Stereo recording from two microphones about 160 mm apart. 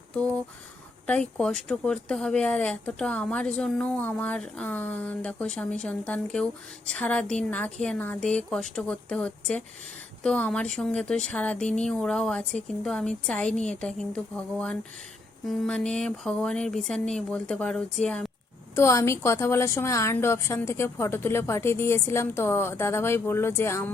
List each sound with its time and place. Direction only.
1.0 s speech: 5° left (ahead or behind)
18.8 s speech: 15° left (ahead or behind)